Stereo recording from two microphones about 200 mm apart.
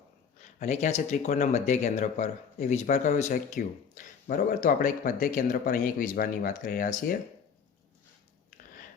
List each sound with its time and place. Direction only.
0.3 s speech: 35° left (ahead or behind)